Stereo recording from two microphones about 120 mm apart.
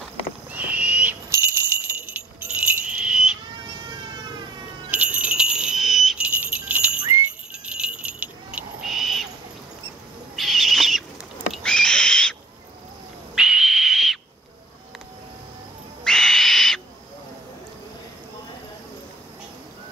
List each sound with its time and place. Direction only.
0.6 s owl: 10° right (ahead or behind)
1.3 s jingle bell: 25° right (ahead or behind)
2.0 s a sound: 10° right (ahead or behind)
3.5 s a sound: 40° right (ahead or behind)
4.9 s jingle bell: 10° right (ahead or behind)
8.8 s owl: centre (ahead or behind)
10.3 s owl: centre (ahead or behind)
13.3 s whistle: 5° right (ahead or behind)
16.0 s owl: 5° left (ahead or behind)